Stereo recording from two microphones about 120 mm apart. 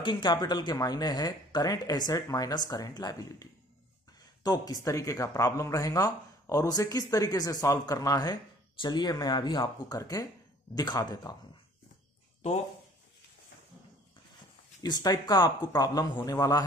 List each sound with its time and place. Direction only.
0.0 s speech: 40° left (ahead or behind)
14.8 s speech: 35° left (ahead or behind)